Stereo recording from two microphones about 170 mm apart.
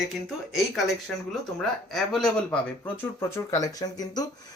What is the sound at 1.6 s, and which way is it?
Speech, centre (ahead or behind).